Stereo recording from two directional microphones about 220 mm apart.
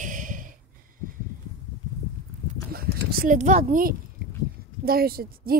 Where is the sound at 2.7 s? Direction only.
40° right (ahead or behind).